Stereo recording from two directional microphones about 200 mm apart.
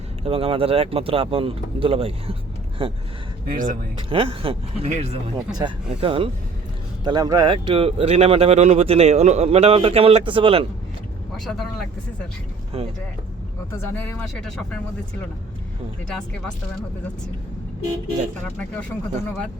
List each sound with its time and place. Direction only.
0.3 s speech: 25° right (ahead or behind)
3.4 s speech: 45° right (ahead or behind)
4.1 s speech: 25° right (ahead or behind)
11.3 s speech: centre (ahead or behind)
13.7 s speech: 10° left (ahead or behind)